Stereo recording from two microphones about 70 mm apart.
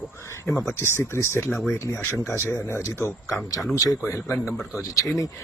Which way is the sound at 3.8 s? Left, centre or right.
Left.